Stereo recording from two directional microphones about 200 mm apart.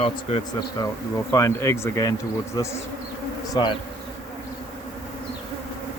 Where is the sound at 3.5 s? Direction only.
20° left (ahead or behind).